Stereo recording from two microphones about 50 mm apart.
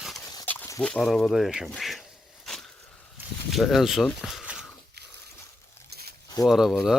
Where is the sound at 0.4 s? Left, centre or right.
Left.